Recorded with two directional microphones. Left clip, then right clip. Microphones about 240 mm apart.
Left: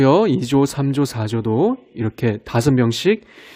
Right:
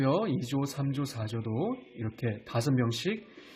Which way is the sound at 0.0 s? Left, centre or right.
Left.